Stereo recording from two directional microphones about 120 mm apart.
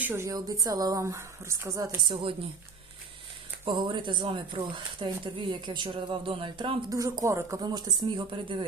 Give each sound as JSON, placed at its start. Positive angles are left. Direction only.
{"t": 0.0, "sound": "a woman's voice", "side_deg": -20}
{"t": 0.3, "sound": "speech", "side_deg": -30}
{"t": 3.7, "sound": "speech", "side_deg": -40}
{"t": 6.9, "sound": "speech", "side_deg": -30}